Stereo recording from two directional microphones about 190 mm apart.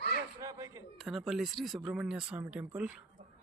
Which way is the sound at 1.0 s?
Centre (ahead or behind).